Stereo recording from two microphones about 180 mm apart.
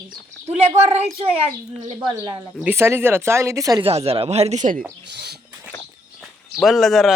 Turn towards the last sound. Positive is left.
turn(degrees=0)  # may be behind; listen again after turning